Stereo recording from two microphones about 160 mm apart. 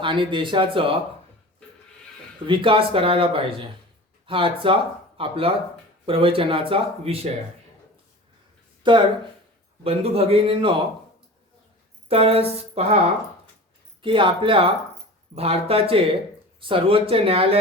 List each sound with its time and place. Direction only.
0.0 s speech: 30° right (ahead or behind)
2.5 s speech: 30° right (ahead or behind)
8.8 s speech: 30° right (ahead or behind)
12.0 s speech: 35° right (ahead or behind)
14.0 s speech: 30° right (ahead or behind)